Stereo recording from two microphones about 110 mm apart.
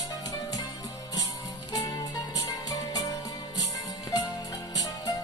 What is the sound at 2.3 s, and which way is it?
Music, 30° left (ahead or behind).